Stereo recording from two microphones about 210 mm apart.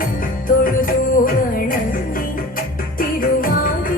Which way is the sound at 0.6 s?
40° left (ahead or behind).